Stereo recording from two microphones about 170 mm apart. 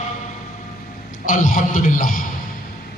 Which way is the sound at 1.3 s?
50° left (ahead or behind).